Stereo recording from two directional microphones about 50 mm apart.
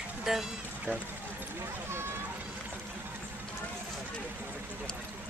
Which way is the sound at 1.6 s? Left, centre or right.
Right.